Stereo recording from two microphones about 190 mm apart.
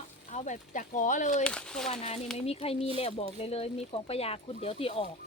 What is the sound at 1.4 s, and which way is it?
Speech, 5° left (ahead or behind).